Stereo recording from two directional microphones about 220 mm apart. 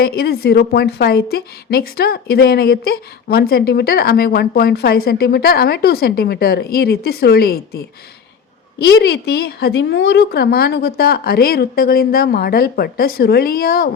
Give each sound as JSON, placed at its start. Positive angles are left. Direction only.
{"t": 0.0, "sound": "a woman's voice", "side_deg": 45}